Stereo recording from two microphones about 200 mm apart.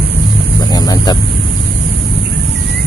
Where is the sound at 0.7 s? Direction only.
20° left (ahead or behind).